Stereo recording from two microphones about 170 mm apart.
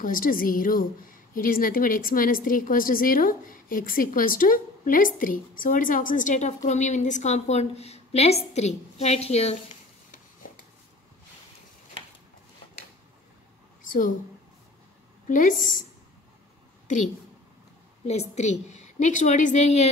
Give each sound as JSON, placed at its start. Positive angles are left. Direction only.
{"t": 0.0, "sound": "a woman's voice", "side_deg": 55}
{"t": 15.2, "sound": "a woman's voice", "side_deg": 50}
{"t": 18.0, "sound": "a woman's voice", "side_deg": 40}